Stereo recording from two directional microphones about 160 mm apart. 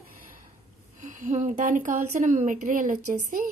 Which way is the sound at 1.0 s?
50° right (ahead or behind).